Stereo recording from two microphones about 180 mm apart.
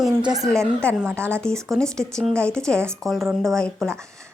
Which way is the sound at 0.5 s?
5° left (ahead or behind).